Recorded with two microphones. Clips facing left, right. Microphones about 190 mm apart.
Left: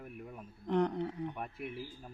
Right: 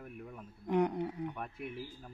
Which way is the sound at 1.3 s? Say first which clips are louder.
Left 1 dB; 10° left (ahead or behind).